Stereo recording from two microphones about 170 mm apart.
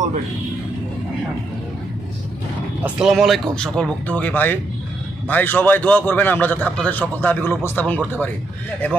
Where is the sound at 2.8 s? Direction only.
5° right (ahead or behind).